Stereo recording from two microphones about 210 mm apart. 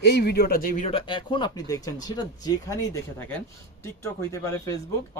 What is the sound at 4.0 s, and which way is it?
Speech, 15° left (ahead or behind).